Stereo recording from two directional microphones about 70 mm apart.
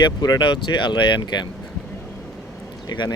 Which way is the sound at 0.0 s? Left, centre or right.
Left.